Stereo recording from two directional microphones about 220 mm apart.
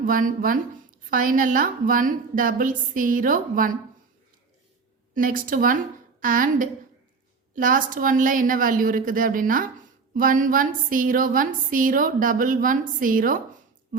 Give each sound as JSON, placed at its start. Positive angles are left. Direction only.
{"t": 0.0, "sound": "a woman's voice", "side_deg": -40}
{"t": 5.1, "sound": "a woman's voice", "side_deg": -40}